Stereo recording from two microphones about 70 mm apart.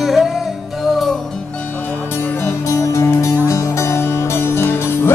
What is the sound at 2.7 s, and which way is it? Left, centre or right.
Music, left.